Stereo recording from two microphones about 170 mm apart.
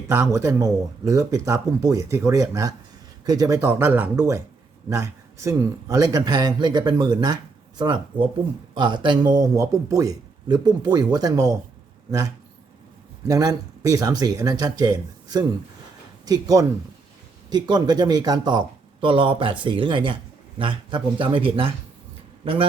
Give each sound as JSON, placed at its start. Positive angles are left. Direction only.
{"t": 0.1, "sound": "speech", "side_deg": -15}
{"t": 13.2, "sound": "speech", "side_deg": -20}